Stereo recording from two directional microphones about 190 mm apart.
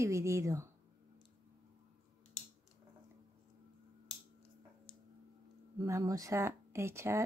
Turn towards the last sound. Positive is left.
turn(degrees=-15)  # may be behind; listen again after turning